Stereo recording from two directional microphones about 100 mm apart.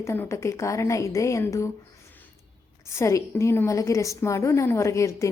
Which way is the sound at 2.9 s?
30° left (ahead or behind).